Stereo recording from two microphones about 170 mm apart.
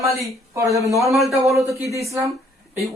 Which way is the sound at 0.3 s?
15° right (ahead or behind).